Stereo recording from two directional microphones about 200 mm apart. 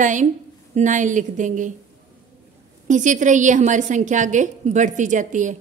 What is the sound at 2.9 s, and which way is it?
A woman's voice, 40° right (ahead or behind).